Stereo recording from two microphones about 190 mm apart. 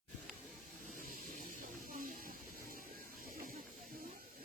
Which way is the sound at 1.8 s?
45° right (ahead or behind).